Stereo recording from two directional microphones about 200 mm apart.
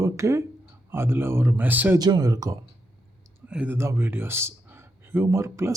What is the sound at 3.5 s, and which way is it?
A man's voice, 5° right (ahead or behind).